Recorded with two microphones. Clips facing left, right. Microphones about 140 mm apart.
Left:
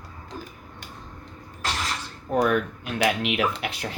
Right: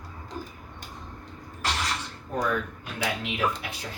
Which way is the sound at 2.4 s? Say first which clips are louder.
Left 6 dB; 75° left (ahead or behind).